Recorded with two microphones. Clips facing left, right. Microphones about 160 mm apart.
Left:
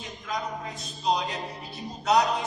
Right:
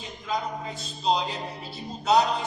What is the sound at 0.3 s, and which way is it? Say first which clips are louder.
Speech: right 3 dB; 30° right (ahead or behind).